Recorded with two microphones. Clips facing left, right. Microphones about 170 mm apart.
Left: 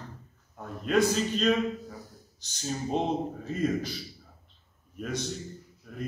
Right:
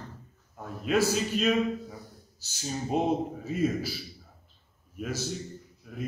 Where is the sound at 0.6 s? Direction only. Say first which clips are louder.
Left 1 dB; 5° right (ahead or behind).